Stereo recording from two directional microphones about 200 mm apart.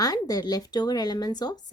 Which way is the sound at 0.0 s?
20° left (ahead or behind).